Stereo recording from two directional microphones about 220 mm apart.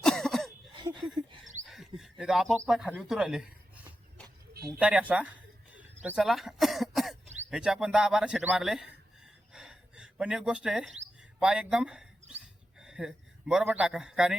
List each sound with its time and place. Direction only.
0.0 s cough: centre (ahead or behind)
0.7 s a sound: 20° right (ahead or behind)
1.6 s a sound: centre (ahead or behind)
2.6 s chicken: centre (ahead or behind)
4.8 s a man's voice: 5° right (ahead or behind)
5.7 s cough: 5° right (ahead or behind)
7.5 s a man's voice: 5° right (ahead or behind)
9.2 s a sound: 5° right (ahead or behind)
11.3 s a man's voice: 5° right (ahead or behind)